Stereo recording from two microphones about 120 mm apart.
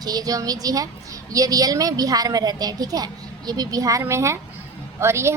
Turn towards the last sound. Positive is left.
turn(degrees=-20)  # may be behind; listen again after turning